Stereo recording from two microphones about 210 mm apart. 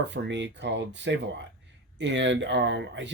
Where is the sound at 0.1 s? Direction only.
60° right (ahead or behind).